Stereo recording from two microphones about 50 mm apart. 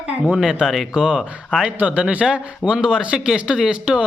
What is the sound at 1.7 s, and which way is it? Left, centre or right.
Speech, right.